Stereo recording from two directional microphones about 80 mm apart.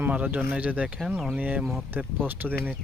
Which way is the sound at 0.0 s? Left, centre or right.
Right.